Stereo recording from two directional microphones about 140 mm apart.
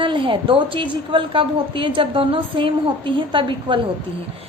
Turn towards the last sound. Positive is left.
turn(degrees=-35)  # may be behind; listen again after turning